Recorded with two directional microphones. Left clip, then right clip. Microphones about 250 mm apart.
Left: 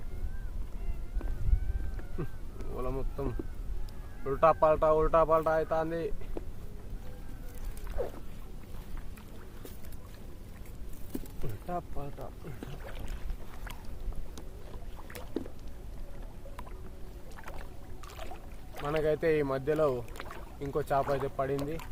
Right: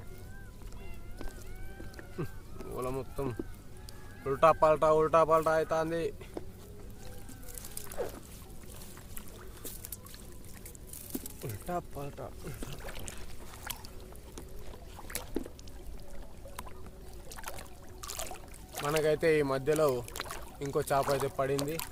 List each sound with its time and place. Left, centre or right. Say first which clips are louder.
2.2 s speech: right 1 dB; centre
8.0 s a sound: left 1 dB; centre
11.4 s rowboat: right 1 dB; centre
15.0 s boat: even; centre
17.3 s boat: right 3 dB; right
19.0 s speech: right 1 dB; centre